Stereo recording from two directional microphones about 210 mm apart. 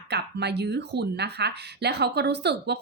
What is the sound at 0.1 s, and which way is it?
Speech, 55° right (ahead or behind).